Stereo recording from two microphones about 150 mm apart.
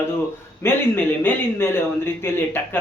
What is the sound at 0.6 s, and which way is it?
Speech, 15° left (ahead or behind).